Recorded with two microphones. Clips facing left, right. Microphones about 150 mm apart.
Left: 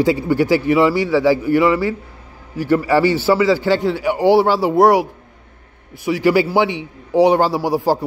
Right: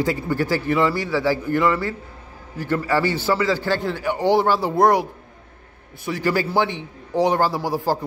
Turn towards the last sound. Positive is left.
turn(degrees=15)  # may be behind; listen again after turning